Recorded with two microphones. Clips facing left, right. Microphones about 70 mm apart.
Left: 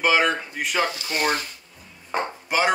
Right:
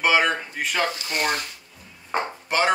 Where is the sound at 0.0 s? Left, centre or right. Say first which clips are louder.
Even; centre.